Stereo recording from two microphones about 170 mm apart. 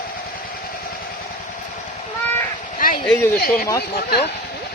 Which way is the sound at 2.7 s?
55° left (ahead or behind).